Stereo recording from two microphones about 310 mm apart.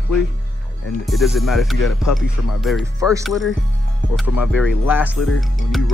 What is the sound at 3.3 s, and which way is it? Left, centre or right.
Speech, centre.